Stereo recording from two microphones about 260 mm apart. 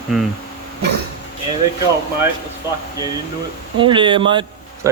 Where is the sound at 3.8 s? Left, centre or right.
Centre.